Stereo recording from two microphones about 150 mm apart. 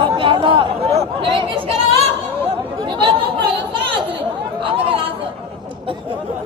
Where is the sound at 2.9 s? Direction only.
35° right (ahead or behind).